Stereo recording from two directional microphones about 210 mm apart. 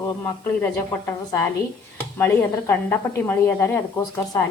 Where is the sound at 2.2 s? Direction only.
10° left (ahead or behind).